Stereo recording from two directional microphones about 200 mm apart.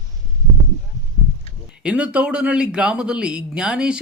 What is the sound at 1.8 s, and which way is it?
A man's voice, 5° right (ahead or behind).